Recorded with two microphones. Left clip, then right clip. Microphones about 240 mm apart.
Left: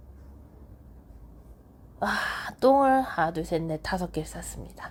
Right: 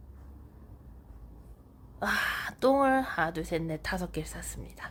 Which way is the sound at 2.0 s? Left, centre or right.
Centre.